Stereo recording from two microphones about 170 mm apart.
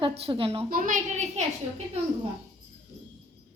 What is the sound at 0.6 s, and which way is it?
Speech, 55° right (ahead or behind).